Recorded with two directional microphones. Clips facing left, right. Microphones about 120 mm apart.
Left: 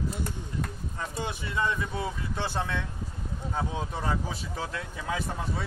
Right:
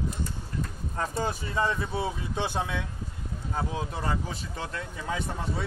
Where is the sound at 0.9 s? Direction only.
55° right (ahead or behind).